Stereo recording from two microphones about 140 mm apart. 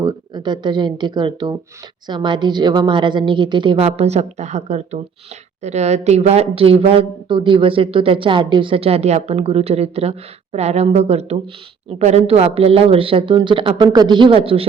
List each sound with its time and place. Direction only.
0.0 s a woman's voice: 30° right (ahead or behind)